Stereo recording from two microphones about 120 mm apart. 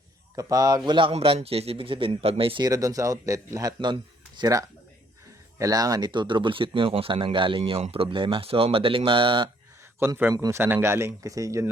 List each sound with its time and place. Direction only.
0.3 s speech: 30° right (ahead or behind)
0.9 s speech: 45° right (ahead or behind)
1.1 s speech: 55° right (ahead or behind)
2.6 s speech: 30° right (ahead or behind)
10.0 s speech: 20° right (ahead or behind)
10.3 s a man's voice: 30° right (ahead or behind)
10.6 s speech: 20° right (ahead or behind)